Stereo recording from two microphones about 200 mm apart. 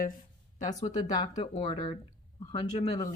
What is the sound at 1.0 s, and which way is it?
Speech, 20° left (ahead or behind).